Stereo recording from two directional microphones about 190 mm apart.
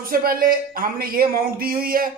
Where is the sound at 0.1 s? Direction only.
50° right (ahead or behind).